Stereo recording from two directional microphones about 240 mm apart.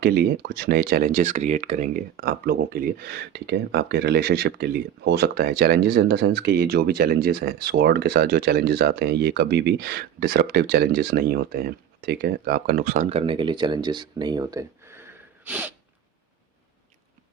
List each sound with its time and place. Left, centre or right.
0.0 s speech: right; by 15.0 s centre
15.4 s sneeze: centre